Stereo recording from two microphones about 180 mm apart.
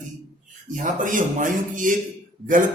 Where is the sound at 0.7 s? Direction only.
45° right (ahead or behind).